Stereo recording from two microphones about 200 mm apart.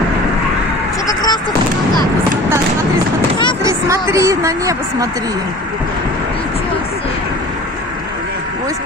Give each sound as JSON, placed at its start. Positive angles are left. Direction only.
{"t": 1.0, "sound": "vehicle", "side_deg": 20}
{"t": 3.6, "sound": "a sound", "side_deg": -15}
{"t": 4.1, "sound": "speech", "side_deg": -15}